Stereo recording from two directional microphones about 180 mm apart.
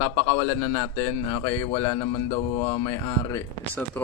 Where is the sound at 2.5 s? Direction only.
35° left (ahead or behind).